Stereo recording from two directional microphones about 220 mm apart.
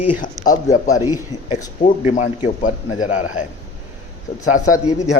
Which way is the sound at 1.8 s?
30° left (ahead or behind).